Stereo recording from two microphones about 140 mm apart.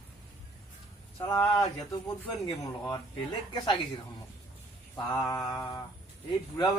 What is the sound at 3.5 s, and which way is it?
Speech, 30° left (ahead or behind).